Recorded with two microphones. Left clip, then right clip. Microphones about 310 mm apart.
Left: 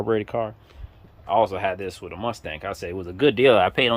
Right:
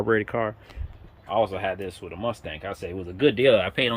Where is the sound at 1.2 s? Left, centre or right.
Centre.